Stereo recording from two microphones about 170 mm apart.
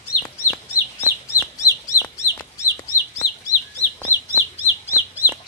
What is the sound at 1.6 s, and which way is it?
Chicken, 15° left (ahead or behind).